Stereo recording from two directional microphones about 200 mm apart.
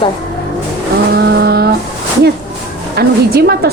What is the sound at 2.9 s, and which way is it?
Speech, 50° right (ahead or behind).